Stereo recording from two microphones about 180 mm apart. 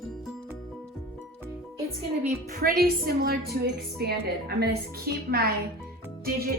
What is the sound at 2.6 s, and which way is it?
Speech, 55° right (ahead or behind).